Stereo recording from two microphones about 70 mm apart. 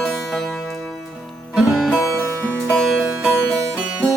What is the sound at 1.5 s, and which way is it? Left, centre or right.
Music, centre.